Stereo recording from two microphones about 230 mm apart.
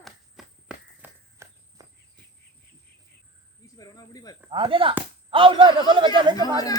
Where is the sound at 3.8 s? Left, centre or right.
Centre.